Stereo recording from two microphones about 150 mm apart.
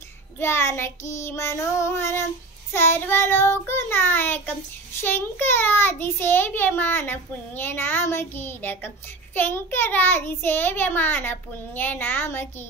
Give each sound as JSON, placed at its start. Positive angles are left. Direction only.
{"t": 0.4, "sound": "a child's voice", "side_deg": 15}